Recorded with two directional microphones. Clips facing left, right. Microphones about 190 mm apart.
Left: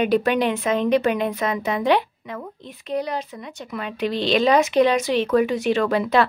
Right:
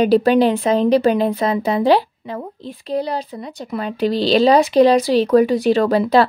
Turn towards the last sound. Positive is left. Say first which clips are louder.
# right 5 dB
turn(degrees=-35)  # may be behind; listen again after turning